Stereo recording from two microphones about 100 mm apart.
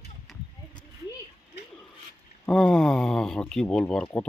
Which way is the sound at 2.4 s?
10° left (ahead or behind).